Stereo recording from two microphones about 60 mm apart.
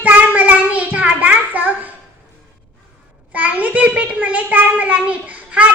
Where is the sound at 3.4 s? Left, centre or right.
Right.